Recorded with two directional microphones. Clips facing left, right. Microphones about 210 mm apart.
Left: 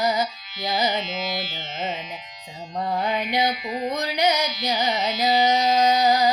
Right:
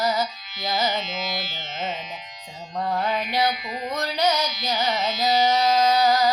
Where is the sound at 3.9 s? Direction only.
15° left (ahead or behind).